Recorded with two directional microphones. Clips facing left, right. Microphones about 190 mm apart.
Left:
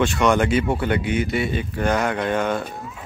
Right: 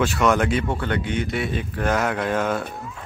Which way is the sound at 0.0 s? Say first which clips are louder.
Left 1 dB; centre (ahead or behind).